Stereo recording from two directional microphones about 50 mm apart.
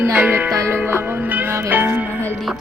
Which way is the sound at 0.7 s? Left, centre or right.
Right.